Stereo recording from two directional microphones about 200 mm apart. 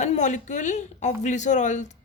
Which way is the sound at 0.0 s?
35° left (ahead or behind).